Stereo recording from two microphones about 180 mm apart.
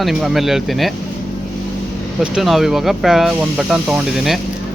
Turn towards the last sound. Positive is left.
turn(degrees=0)  # may be behind; listen again after turning